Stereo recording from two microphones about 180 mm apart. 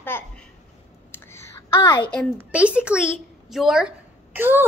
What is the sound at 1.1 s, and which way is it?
Whispering, 15° left (ahead or behind).